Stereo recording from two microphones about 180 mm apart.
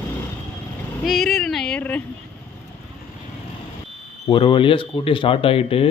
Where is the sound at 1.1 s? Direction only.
Centre (ahead or behind).